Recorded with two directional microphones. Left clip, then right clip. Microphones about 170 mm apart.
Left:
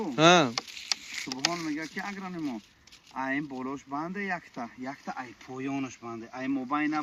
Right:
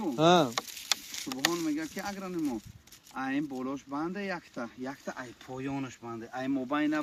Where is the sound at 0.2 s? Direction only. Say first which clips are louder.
Left 3 dB; 55° left (ahead or behind).